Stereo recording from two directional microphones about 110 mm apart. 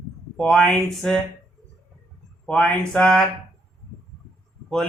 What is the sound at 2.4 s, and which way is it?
Speech, 10° left (ahead or behind).